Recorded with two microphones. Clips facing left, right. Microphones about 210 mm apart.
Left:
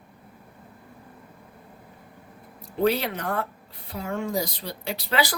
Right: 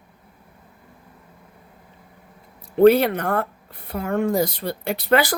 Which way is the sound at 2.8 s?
55° right (ahead or behind).